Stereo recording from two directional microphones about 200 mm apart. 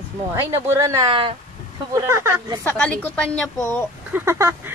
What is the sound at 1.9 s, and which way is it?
Speech, 15° right (ahead or behind).